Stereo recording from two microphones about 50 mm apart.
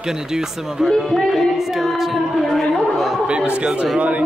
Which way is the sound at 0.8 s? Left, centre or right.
Centre.